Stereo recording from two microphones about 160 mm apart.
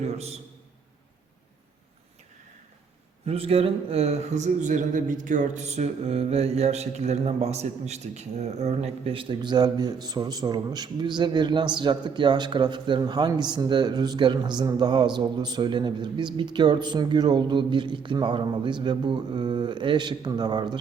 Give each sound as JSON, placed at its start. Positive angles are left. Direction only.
{"t": 0.0, "sound": "a man's voice", "side_deg": -40}
{"t": 3.2, "sound": "a man's voice", "side_deg": -35}